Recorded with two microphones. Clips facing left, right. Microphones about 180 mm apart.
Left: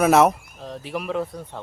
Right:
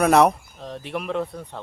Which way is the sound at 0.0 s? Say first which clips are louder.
Even; centre (ahead or behind).